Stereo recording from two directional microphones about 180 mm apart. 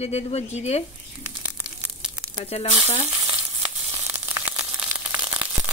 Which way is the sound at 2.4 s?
35° left (ahead or behind).